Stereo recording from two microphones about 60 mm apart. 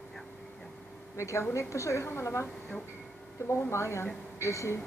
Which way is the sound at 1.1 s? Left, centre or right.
Left.